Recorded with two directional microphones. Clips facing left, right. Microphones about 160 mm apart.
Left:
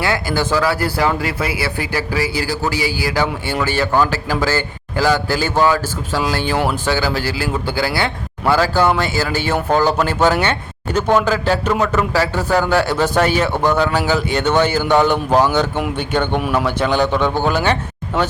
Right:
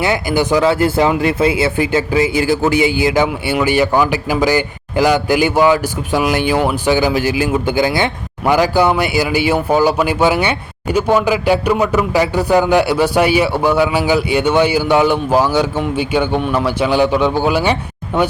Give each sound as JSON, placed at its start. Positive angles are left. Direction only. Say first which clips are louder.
{"t": 0.0, "sound": "speech", "louder": "right 3 dB", "side_deg": -20}
{"t": 16.4, "sound": "a man's voice", "louder": "right 1 dB", "side_deg": 5}
{"t": 16.6, "sound": "speech", "louder": "right 3 dB", "side_deg": -10}